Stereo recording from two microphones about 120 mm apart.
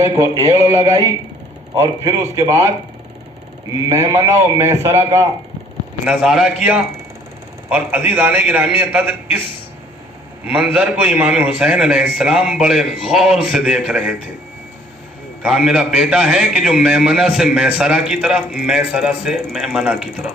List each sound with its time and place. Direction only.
0.0 s a man's voice: 25° right (ahead or behind)
3.8 s a man's voice: 30° right (ahead or behind)
6.1 s a man's voice: 10° right (ahead or behind)
10.4 s a man's voice: 10° right (ahead or behind)
15.4 s a man's voice: 5° right (ahead or behind)